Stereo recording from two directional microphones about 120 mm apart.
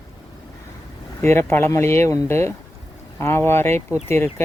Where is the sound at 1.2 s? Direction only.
20° left (ahead or behind).